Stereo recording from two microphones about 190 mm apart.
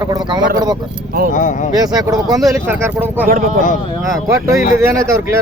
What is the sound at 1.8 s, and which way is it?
Speech, 20° right (ahead or behind).